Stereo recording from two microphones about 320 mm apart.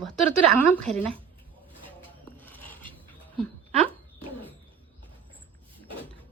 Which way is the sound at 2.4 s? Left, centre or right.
Centre.